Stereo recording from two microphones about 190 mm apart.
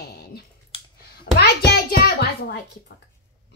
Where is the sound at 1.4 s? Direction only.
55° left (ahead or behind).